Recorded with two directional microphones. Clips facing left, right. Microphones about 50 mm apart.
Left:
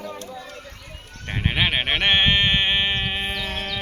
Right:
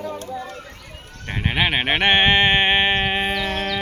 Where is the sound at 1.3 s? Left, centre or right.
Centre; by 2.9 s right.